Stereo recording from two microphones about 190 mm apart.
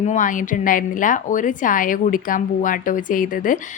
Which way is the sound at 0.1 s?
45° left (ahead or behind).